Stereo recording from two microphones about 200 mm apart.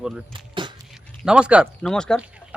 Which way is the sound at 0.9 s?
5° right (ahead or behind).